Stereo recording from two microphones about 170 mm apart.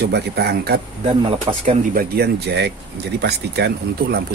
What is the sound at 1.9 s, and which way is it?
Speech, 65° right (ahead or behind).